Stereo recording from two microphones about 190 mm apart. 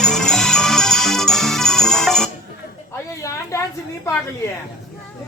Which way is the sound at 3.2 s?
15° left (ahead or behind).